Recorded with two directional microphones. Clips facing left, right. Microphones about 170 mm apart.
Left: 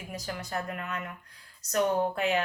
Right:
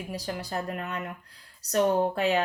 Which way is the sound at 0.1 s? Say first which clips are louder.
Right 1 dB; 35° right (ahead or behind).